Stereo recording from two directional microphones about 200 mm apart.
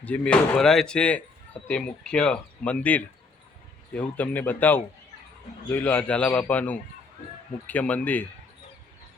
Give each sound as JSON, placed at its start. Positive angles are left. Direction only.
{"t": 0.0, "sound": "a man's voice", "side_deg": 5}